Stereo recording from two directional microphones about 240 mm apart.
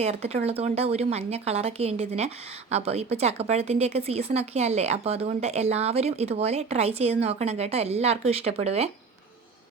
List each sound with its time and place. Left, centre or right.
0.0 s speech: right